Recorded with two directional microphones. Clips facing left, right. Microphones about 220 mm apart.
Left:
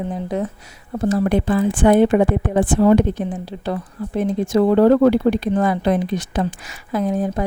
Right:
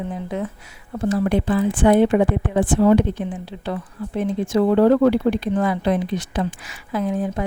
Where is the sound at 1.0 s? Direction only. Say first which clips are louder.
Left 2 dB; 45° left (ahead or behind).